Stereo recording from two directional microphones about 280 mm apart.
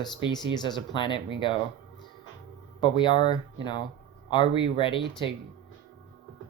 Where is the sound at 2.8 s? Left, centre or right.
Centre.